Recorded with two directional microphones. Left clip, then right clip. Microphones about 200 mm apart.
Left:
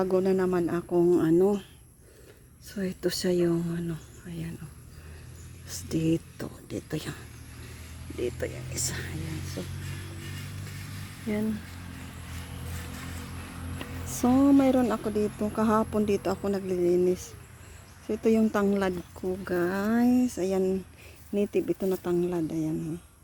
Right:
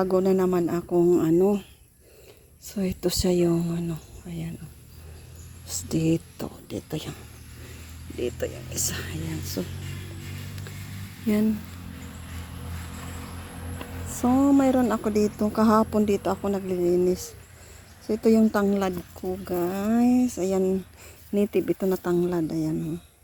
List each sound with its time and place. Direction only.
0.0 s speech: 5° right (ahead or behind)
2.6 s speech: 10° right (ahead or behind)
5.6 s speech: 5° right (ahead or behind)
8.2 s speech: 5° right (ahead or behind)
9.6 s music: 30° right (ahead or behind)
14.1 s speech: 15° left (ahead or behind); by 22.7 s 10° right (ahead or behind)